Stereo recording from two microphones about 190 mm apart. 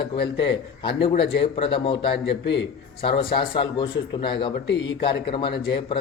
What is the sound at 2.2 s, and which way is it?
Speech, 65° left (ahead or behind).